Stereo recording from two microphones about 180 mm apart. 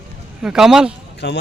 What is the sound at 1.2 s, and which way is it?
Speech, 70° left (ahead or behind).